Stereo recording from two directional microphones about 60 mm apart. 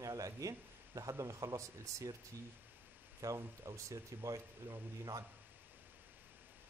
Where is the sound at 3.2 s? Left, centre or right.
Right.